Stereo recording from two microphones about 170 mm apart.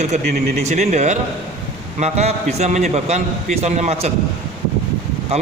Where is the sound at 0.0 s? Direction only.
45° right (ahead or behind).